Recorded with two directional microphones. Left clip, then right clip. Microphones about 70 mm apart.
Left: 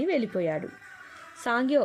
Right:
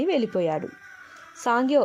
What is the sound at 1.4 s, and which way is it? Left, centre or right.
Speech, right.